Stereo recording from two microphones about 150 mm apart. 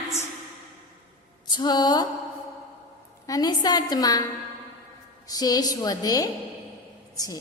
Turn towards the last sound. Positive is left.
turn(degrees=25)  # may be behind; listen again after turning